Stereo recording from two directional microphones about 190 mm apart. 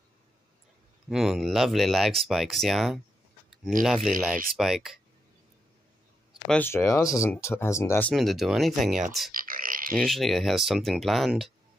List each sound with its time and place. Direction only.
1.0 s speech: centre (ahead or behind)
6.5 s speech: 10° left (ahead or behind)
8.1 s speech: centre (ahead or behind)
9.3 s a sound: 45° right (ahead or behind)
9.9 s speech: centre (ahead or behind)